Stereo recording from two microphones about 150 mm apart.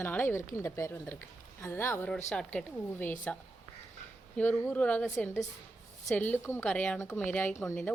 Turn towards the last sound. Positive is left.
turn(degrees=15)  # may be behind; listen again after turning